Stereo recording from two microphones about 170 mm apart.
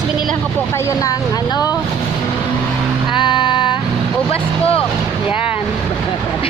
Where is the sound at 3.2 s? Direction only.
30° left (ahead or behind).